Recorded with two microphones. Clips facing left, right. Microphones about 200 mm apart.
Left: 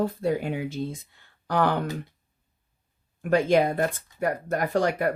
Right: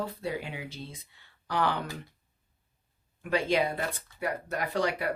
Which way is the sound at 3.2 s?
45° left (ahead or behind).